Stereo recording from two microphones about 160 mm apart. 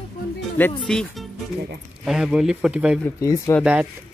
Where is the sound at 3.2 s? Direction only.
20° left (ahead or behind).